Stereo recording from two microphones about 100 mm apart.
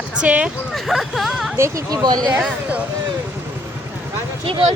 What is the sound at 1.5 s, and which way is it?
Speech, 30° right (ahead or behind).